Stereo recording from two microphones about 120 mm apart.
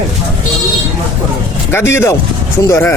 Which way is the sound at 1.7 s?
20° left (ahead or behind).